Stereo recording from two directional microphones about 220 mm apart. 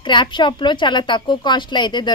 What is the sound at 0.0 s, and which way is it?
A woman's voice, 20° left (ahead or behind).